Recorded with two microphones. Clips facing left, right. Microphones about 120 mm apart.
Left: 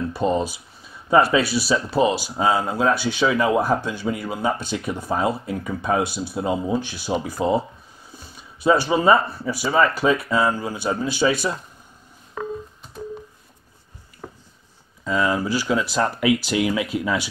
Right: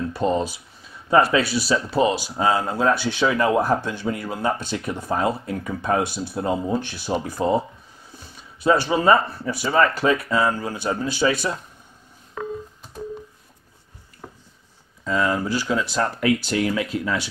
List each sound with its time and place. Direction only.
0.1 s speech: 5° left (ahead or behind)
14.2 s a sound: 90° left
15.0 s speech: 5° left (ahead or behind)